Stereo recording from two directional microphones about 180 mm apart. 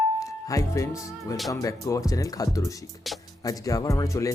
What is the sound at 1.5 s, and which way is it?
Speech, 20° left (ahead or behind).